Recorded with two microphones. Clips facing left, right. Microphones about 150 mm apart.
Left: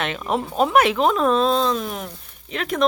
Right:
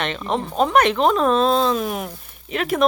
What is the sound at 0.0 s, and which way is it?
Speech, 5° left (ahead or behind).